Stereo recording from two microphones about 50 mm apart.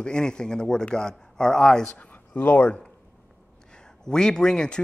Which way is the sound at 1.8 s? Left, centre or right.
Left.